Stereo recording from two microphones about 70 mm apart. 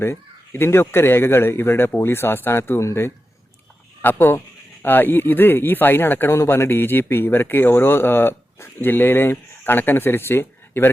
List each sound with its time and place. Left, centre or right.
0.0 s speech: left